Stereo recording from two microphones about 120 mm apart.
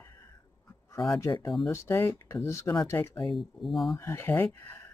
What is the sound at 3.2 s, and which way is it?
Speech, centre (ahead or behind).